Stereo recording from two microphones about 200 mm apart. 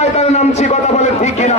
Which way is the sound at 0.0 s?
30° left (ahead or behind).